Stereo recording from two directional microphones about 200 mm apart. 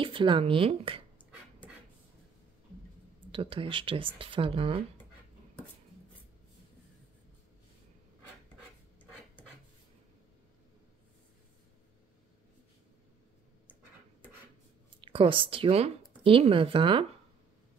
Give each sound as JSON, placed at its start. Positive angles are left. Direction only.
{"t": 0.0, "sound": "speech", "side_deg": -25}
{"t": 3.3, "sound": "speech", "side_deg": -25}
{"t": 15.0, "sound": "speech", "side_deg": -25}